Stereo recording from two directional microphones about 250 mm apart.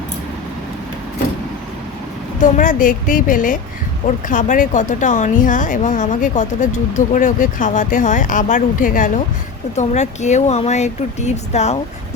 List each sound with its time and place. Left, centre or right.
2.4 s a woman's voice: left